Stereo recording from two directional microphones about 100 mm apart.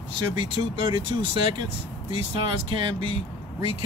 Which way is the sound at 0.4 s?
50° right (ahead or behind).